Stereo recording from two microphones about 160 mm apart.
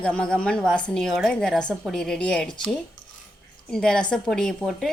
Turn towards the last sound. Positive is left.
turn(degrees=5)  # may be behind; listen again after turning